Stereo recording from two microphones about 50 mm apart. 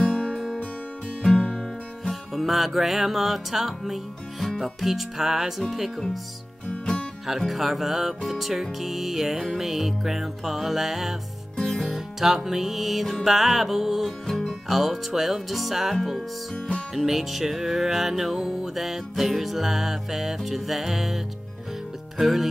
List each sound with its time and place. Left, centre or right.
0.0 s music: centre
0.3 s music: centre
1.6 s music: centre
6.7 s music: centre
7.2 s music: centre
11.5 s music: centre
11.8 s music: centre
14.2 s music: centre
14.7 s music: centre
16.5 s music: centre
16.9 s music: centre